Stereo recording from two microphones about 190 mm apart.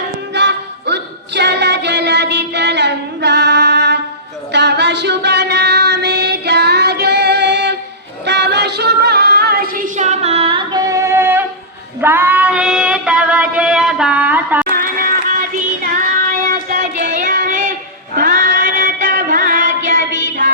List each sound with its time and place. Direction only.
0.3 s music: 65° right (ahead or behind)
8.2 s female singing: 65° right (ahead or behind); by 14.7 s 10° right (ahead or behind)
14.7 s music: 50° right (ahead or behind)
15.5 s child singing: 45° right (ahead or behind)